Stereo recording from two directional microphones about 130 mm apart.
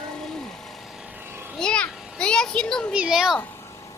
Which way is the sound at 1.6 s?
5° left (ahead or behind).